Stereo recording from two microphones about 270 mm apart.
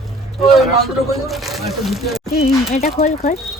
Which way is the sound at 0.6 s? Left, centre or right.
Centre.